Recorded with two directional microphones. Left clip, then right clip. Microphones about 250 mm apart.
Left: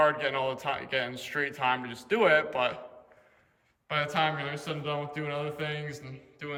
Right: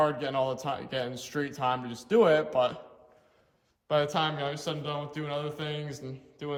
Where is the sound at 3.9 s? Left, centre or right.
Centre.